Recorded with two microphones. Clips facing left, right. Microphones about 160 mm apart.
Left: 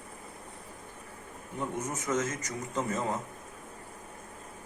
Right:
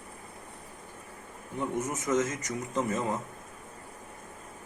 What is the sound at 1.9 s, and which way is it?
Speech, 20° right (ahead or behind).